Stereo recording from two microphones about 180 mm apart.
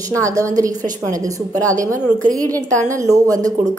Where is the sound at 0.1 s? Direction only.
20° right (ahead or behind).